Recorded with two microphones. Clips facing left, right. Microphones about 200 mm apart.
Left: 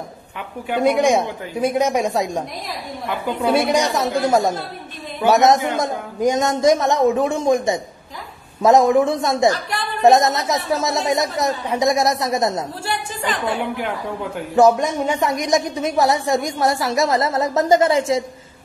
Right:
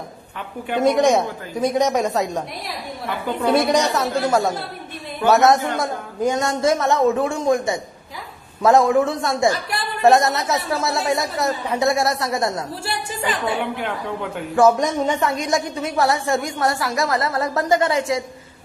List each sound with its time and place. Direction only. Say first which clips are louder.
0.7 s a man's voice: even; 5° left (ahead or behind)
3.4 s a man's voice: even; 10° left (ahead or behind)
12.8 s a woman's voice: left 1 dB; 10° right (ahead or behind)
14.8 s a woman's voice: even; 10° left (ahead or behind)